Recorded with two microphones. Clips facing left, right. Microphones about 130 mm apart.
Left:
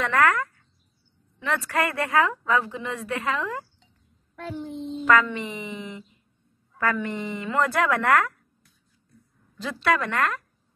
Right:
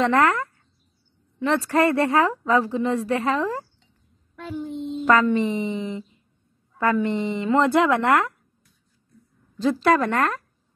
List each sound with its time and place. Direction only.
0.0 s speech: 25° right (ahead or behind)
4.9 s speech: 35° right (ahead or behind)
9.6 s speech: 35° right (ahead or behind)